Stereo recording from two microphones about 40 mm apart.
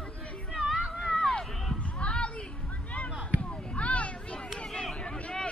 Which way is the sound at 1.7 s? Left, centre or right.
Left.